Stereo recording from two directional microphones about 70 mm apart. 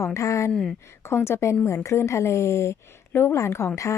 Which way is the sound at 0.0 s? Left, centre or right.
Left.